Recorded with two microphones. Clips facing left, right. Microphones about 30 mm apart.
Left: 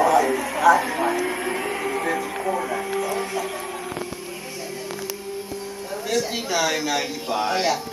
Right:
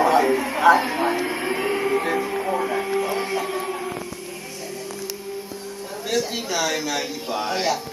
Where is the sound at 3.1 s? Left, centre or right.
Right.